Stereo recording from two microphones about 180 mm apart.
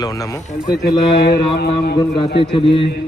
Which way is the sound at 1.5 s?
60° left (ahead or behind).